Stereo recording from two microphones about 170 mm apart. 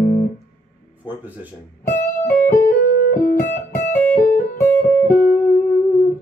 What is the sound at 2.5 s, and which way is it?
Music, 55° left (ahead or behind).